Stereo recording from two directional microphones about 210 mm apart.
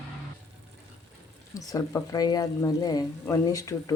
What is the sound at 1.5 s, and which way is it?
Speech, 15° left (ahead or behind).